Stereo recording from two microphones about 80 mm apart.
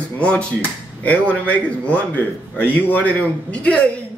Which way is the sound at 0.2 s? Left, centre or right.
Centre.